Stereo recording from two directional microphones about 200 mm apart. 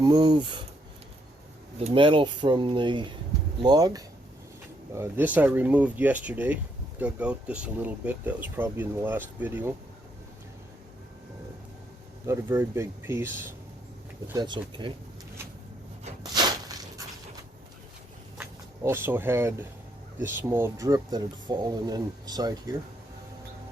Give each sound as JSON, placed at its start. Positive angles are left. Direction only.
{"t": 0.0, "sound": "speech", "side_deg": -20}
{"t": 1.8, "sound": "speech", "side_deg": -25}
{"t": 4.9, "sound": "speech", "side_deg": -10}
{"t": 12.2, "sound": "speech", "side_deg": -10}
{"t": 14.3, "sound": "speech", "side_deg": -25}
{"t": 16.3, "sound": "a sound", "side_deg": -20}
{"t": 18.8, "sound": "speech", "side_deg": -10}